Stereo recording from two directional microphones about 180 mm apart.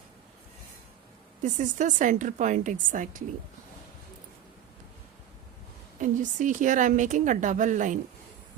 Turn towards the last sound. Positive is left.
turn(degrees=-45)  # may be behind; listen again after turning